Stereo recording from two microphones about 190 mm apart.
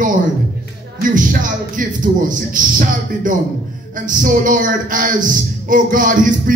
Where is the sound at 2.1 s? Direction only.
45° right (ahead or behind).